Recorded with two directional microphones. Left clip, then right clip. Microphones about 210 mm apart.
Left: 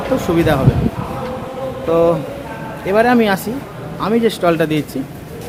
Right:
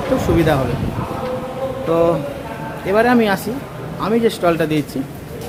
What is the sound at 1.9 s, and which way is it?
A man's voice, 15° left (ahead or behind).